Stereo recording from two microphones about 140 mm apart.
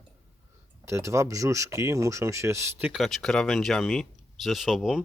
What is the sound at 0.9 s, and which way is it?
Speech, 20° right (ahead or behind).